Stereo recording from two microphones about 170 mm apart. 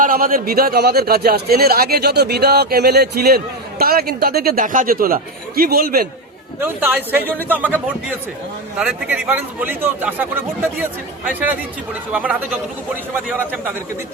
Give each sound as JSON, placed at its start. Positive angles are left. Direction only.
{"t": 0.0, "sound": "a man's voice", "side_deg": -55}
{"t": 6.8, "sound": "speech", "side_deg": -10}
{"t": 12.1, "sound": "speech", "side_deg": -10}